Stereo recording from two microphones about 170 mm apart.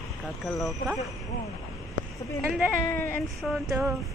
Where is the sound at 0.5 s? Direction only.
Centre (ahead or behind).